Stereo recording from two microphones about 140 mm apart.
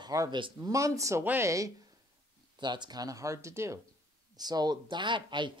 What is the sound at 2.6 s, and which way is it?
Speech, 30° right (ahead or behind).